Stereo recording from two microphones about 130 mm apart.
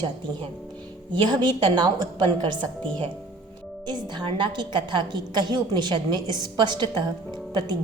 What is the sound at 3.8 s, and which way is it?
A woman's voice, 35° right (ahead or behind).